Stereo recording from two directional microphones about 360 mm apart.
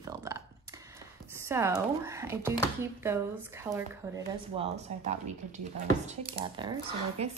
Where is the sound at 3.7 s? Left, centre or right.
Centre.